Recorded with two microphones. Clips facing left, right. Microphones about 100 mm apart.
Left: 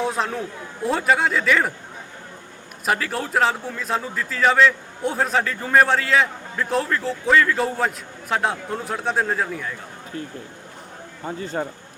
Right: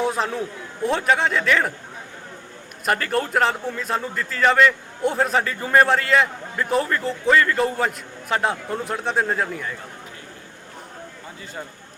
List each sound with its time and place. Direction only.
0.0 s chatter: centre (ahead or behind)
0.8 s a man's voice: centre (ahead or behind)
2.8 s a man's voice: centre (ahead or behind)
11.3 s speech: 45° left (ahead or behind)